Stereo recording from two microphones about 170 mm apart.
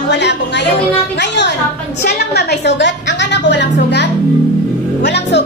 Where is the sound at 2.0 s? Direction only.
75° left (ahead or behind); by 5.4 s 90° left.